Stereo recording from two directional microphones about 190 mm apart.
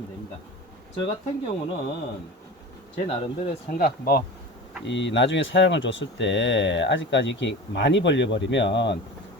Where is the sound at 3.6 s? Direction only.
50° left (ahead or behind).